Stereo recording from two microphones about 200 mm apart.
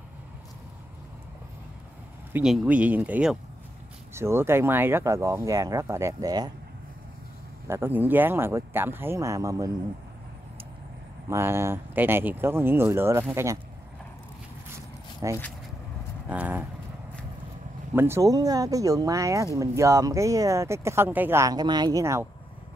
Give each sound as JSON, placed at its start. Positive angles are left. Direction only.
{"t": 2.3, "sound": "speech", "side_deg": -5}
{"t": 7.6, "sound": "speech", "side_deg": -10}
{"t": 11.2, "sound": "speech", "side_deg": -15}
{"t": 15.2, "sound": "speech", "side_deg": -15}
{"t": 17.9, "sound": "speech", "side_deg": -10}